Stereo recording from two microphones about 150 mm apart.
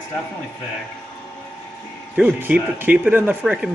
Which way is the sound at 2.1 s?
10° right (ahead or behind).